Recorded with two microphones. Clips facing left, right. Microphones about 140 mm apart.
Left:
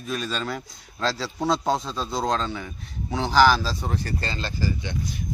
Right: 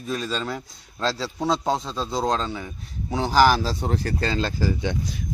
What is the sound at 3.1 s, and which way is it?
Speech, 45° right (ahead or behind).